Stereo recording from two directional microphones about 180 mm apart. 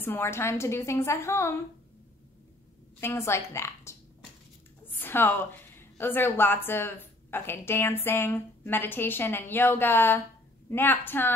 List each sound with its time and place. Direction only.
0.0 s a woman's voice: 10° left (ahead or behind)
3.0 s a woman's voice: 15° left (ahead or behind)